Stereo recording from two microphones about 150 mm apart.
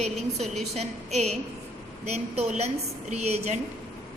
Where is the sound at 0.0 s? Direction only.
45° right (ahead or behind).